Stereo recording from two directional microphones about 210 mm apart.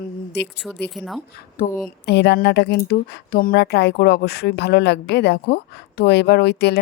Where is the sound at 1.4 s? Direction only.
40° left (ahead or behind).